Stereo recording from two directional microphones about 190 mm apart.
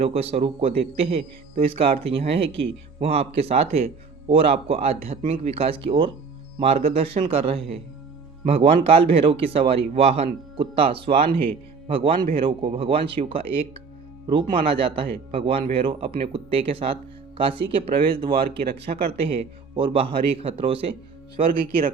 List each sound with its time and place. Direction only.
0.0 s speech: 30° right (ahead or behind)
21.6 s speech: 50° right (ahead or behind)